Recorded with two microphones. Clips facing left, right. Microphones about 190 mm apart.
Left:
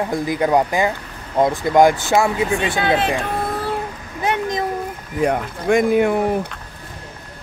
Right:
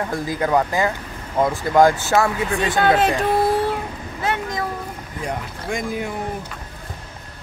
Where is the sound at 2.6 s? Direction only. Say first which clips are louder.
Right 2 dB; 45° right (ahead or behind).